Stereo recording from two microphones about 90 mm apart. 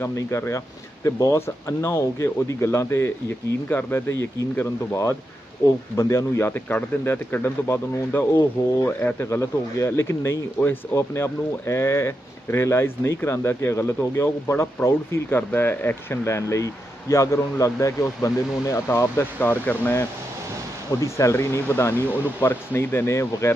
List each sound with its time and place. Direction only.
0.0 s speech: 30° left (ahead or behind)
19.4 s speech: 20° left (ahead or behind)